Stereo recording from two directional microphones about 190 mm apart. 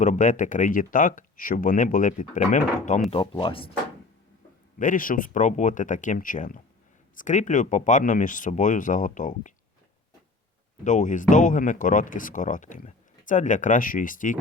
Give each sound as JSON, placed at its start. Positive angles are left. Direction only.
{"t": 0.0, "sound": "speech", "side_deg": 40}
{"t": 3.1, "sound": "speech", "side_deg": 25}
{"t": 4.8, "sound": "speech", "side_deg": 45}
{"t": 10.8, "sound": "speech", "side_deg": 40}